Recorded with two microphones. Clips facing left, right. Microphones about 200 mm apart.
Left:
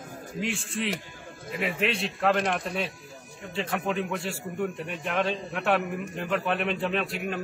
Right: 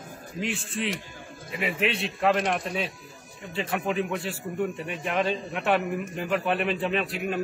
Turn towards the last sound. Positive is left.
turn(degrees=0)  # may be behind; listen again after turning